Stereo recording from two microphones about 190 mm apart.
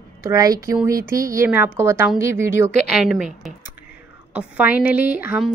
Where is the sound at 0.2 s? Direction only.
15° right (ahead or behind).